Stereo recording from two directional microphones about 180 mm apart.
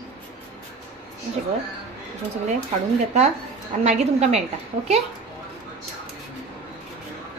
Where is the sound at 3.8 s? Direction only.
40° right (ahead or behind).